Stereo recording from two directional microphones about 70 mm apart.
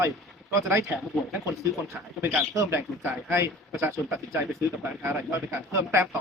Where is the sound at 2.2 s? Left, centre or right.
Right.